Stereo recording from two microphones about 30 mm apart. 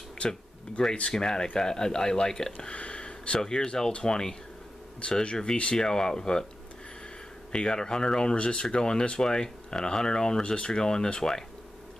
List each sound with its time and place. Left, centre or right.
0.3 s speech: left
3.4 s speech: left
5.2 s speech: left
7.5 s speech: left
8.4 s speech: left